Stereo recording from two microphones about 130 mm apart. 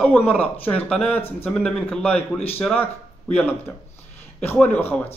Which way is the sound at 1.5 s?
Centre (ahead or behind).